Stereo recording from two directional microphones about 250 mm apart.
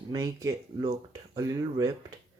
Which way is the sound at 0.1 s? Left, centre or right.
Centre.